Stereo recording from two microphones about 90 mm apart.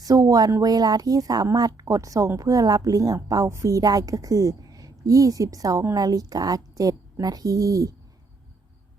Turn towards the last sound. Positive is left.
turn(degrees=-40)  # may be behind; listen again after turning